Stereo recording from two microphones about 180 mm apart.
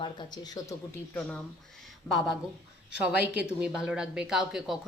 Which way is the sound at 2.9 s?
5° right (ahead or behind).